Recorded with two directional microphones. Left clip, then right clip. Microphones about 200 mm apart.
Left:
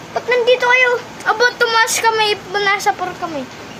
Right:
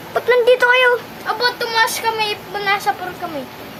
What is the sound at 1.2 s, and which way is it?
Speech, 35° left (ahead or behind).